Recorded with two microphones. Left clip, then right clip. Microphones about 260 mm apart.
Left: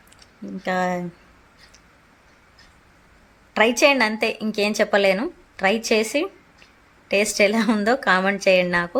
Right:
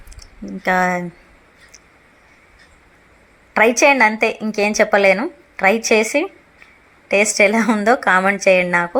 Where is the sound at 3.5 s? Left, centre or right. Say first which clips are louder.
Right 4 dB; centre.